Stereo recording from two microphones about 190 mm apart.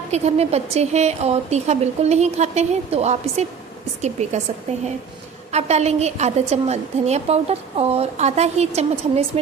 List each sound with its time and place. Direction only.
0.1 s a woman's voice: 35° right (ahead or behind)
5.5 s a woman's voice: 35° right (ahead or behind)